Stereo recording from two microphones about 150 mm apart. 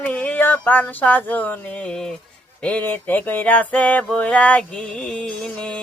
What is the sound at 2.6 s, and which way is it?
Music, 10° left (ahead or behind).